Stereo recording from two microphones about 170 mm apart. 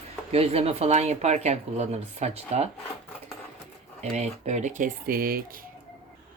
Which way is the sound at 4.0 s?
40° right (ahead or behind).